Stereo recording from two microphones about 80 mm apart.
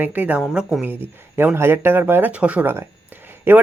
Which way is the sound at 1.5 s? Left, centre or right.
Right.